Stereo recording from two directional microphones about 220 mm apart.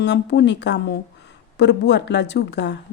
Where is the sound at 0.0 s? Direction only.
50° left (ahead or behind).